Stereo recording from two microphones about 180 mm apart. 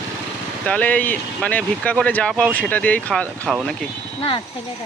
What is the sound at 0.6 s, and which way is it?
Speech, 5° left (ahead or behind).